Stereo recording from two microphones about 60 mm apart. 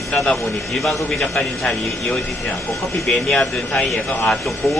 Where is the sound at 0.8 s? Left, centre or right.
Centre.